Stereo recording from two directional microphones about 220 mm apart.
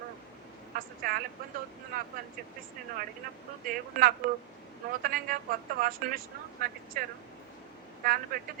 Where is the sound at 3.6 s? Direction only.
40° right (ahead or behind).